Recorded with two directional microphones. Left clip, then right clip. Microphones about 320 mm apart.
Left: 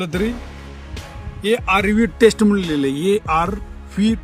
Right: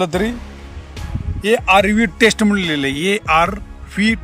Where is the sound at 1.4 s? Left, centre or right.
Centre.